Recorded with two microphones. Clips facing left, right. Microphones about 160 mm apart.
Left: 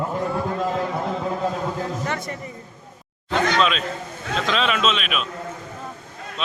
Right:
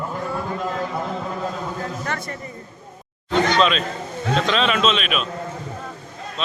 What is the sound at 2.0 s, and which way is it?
Speech, 20° left (ahead or behind).